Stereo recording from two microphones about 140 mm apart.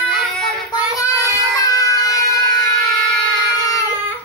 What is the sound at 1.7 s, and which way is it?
Child singing, 25° left (ahead or behind).